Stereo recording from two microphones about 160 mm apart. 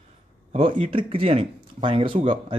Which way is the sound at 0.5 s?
35° right (ahead or behind).